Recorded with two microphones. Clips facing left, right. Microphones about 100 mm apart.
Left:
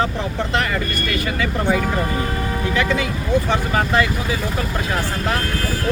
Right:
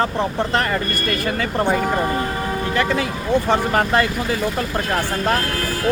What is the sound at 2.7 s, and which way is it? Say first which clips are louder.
Speech: even; 45° right (ahead or behind).